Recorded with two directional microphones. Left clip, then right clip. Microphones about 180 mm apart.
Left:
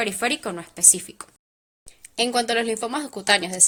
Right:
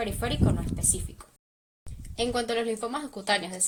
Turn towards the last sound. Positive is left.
turn(degrees=40)  # may be behind; listen again after turning